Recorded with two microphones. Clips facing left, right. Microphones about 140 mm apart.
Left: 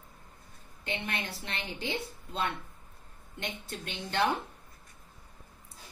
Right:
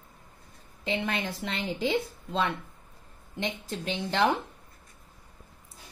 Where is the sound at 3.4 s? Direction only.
90° right.